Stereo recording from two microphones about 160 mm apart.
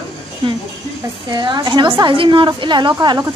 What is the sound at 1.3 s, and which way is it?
A woman's voice, 25° right (ahead or behind).